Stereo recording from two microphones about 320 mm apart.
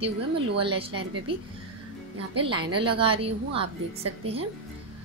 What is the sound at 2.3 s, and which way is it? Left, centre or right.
Speech, centre.